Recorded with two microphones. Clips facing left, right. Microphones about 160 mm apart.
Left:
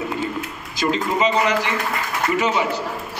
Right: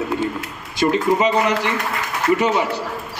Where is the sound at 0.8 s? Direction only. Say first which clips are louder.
Right 4 dB; 35° right (ahead or behind).